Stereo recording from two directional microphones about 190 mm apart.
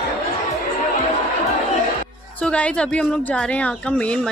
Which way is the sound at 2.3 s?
5° left (ahead or behind).